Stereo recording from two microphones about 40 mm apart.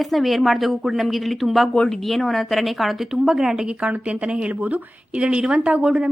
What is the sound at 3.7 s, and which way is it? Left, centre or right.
Speech, right.